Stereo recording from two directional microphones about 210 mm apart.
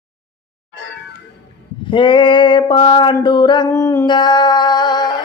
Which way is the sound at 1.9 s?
25° left (ahead or behind).